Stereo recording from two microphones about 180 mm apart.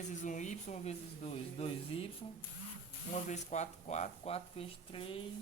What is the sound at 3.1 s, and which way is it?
Speech, 40° left (ahead or behind).